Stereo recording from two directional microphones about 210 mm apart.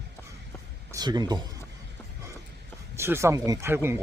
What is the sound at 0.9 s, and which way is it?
Speech, 20° right (ahead or behind).